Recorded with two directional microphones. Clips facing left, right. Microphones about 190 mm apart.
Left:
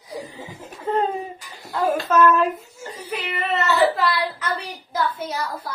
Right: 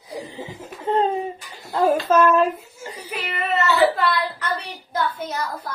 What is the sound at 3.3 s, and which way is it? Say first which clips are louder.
A child's voice: right 1 dB; centre (ahead or behind).